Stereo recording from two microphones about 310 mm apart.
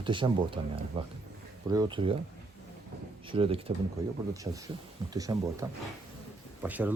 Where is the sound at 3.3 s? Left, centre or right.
Centre.